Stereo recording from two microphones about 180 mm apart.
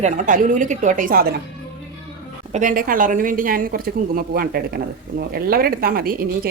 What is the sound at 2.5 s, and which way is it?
A woman's voice, 50° right (ahead or behind).